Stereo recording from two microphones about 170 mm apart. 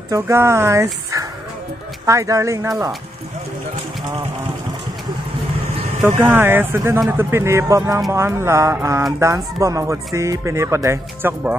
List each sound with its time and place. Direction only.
0.1 s speech: 15° right (ahead or behind)
2.0 s speech: 20° right (ahead or behind)
6.0 s speech: 15° right (ahead or behind)